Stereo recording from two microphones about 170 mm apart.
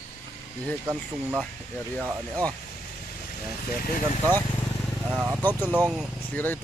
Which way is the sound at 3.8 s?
55° left (ahead or behind).